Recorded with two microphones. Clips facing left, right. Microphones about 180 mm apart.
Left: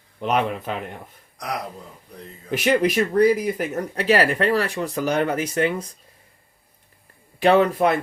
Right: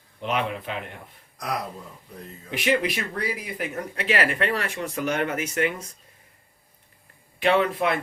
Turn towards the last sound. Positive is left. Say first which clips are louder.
# left 5 dB
turn(degrees=40)  # may be behind; listen again after turning